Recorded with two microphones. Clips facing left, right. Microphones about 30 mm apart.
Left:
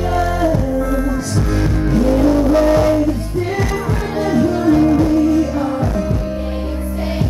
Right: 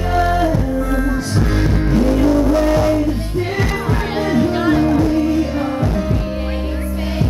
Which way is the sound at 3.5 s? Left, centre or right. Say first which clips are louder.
Right 1 dB; right.